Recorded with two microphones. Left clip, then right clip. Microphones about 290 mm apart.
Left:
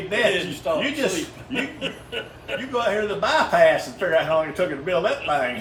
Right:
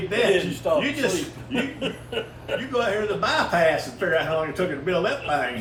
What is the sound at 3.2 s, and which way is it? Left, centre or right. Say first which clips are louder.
Speech: left 4 dB; left.